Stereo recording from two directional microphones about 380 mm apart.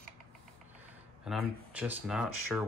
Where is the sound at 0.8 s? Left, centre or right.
Centre.